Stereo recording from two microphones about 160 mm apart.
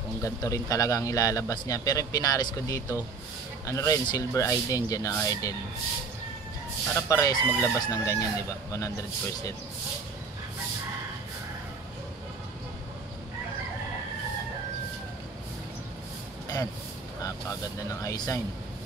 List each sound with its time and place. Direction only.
0.2 s a man's voice: 20° left (ahead or behind)
7.0 s a man's voice: 20° left (ahead or behind)
17.2 s speech: 20° left (ahead or behind)